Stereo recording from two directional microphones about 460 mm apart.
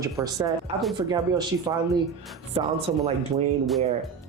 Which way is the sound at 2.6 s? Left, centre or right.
Centre.